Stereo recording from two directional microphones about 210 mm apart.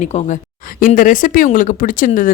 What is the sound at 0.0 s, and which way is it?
Speech, 35° left (ahead or behind).